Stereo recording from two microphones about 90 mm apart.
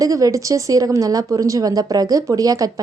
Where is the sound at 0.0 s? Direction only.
40° right (ahead or behind).